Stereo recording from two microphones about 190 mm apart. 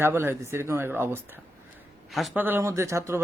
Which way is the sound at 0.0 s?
10° right (ahead or behind).